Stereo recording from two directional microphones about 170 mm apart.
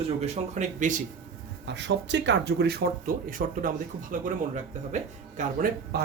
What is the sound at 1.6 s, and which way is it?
Speech, 90° right.